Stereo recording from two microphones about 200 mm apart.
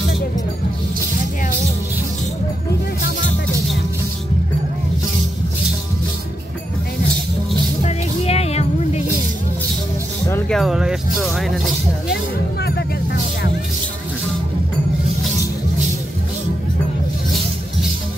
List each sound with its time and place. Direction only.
7.8 s music: 30° left (ahead or behind)
10.5 s music: centre (ahead or behind)